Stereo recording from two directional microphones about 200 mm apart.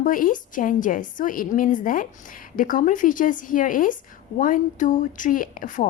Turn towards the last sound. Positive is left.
turn(degrees=40)  # may be behind; listen again after turning